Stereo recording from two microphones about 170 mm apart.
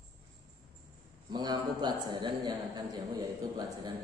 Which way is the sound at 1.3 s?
25° right (ahead or behind).